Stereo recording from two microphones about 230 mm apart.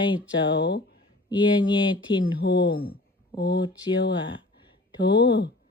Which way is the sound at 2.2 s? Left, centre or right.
Left.